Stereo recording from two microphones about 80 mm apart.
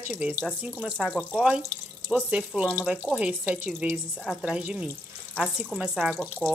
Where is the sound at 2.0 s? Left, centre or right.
Centre.